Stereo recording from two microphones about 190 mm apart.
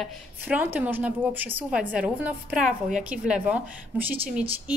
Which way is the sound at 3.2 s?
5° right (ahead or behind).